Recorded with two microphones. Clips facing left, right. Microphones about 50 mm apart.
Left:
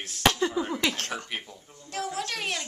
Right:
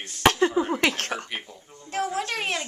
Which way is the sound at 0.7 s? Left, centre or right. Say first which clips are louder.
Right 4 dB; right.